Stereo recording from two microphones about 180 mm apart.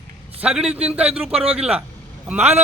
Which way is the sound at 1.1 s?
35° right (ahead or behind).